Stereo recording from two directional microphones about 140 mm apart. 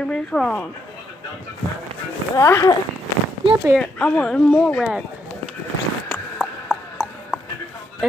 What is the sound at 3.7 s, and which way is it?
Speech, 5° left (ahead or behind).